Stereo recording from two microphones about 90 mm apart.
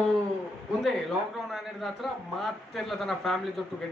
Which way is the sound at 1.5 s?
Centre (ahead or behind).